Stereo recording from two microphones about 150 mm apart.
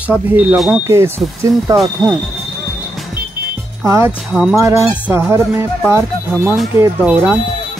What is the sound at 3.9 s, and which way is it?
Speech, 15° right (ahead or behind).